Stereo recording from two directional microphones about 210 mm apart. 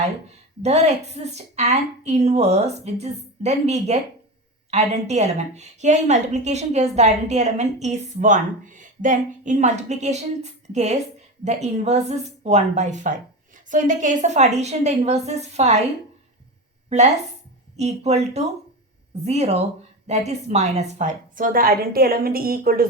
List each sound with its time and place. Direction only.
0.6 s a woman's voice: 30° right (ahead or behind)
17.7 s a woman's voice: 30° right (ahead or behind)